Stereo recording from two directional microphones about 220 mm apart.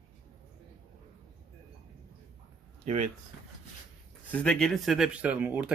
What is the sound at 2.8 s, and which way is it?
Speech, 30° right (ahead or behind).